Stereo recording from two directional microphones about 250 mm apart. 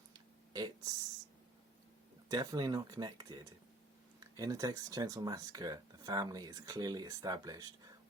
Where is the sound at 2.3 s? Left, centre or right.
Centre.